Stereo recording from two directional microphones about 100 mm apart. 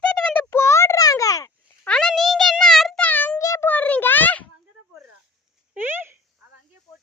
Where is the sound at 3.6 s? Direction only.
15° left (ahead or behind).